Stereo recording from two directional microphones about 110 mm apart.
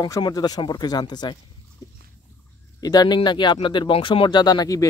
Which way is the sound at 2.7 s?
35° left (ahead or behind).